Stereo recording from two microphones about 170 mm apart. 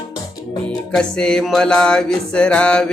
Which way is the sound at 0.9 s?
5° left (ahead or behind).